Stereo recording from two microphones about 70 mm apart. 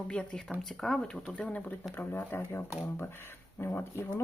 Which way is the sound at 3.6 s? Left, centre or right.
Left.